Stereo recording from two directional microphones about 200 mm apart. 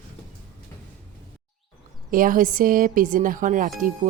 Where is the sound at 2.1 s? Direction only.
45° right (ahead or behind).